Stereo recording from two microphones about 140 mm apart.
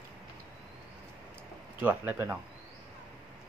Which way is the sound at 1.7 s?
15° right (ahead or behind).